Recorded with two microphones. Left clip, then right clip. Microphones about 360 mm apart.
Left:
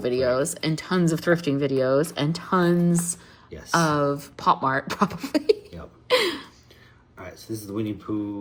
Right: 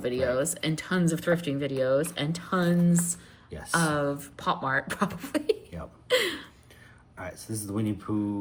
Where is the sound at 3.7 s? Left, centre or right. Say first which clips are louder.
Left 5 dB; centre.